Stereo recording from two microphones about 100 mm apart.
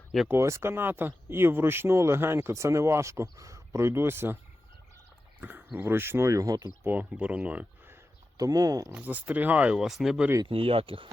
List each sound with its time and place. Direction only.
0.3 s speech: 30° right (ahead or behind)
5.4 s speech: 20° right (ahead or behind); by 6.7 s 35° right (ahead or behind)
6.8 s speech: 20° right (ahead or behind)
8.4 s speech: 40° right (ahead or behind)
8.9 s speech: 15° right (ahead or behind)
10.4 s speech: 65° right (ahead or behind)